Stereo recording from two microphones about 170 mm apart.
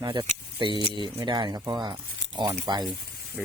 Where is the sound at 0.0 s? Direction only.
25° right (ahead or behind).